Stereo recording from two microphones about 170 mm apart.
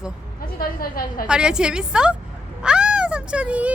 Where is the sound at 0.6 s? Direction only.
60° left (ahead or behind).